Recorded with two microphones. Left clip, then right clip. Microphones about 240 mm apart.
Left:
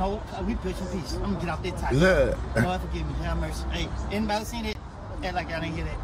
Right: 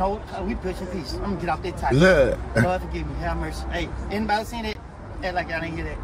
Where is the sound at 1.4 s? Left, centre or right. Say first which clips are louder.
Right 8 dB; centre.